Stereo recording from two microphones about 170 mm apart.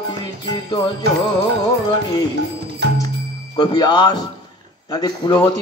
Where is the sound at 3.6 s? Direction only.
25° left (ahead or behind).